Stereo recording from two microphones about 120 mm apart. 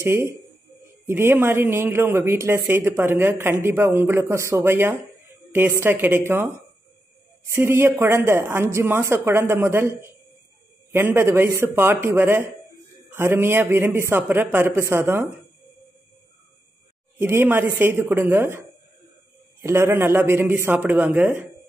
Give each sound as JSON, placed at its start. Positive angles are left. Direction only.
{"t": 0.0, "sound": "speech", "side_deg": -20}
{"t": 17.2, "sound": "speech", "side_deg": -20}